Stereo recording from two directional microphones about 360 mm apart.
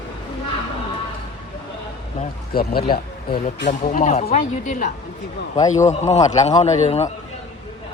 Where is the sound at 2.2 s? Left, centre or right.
Left.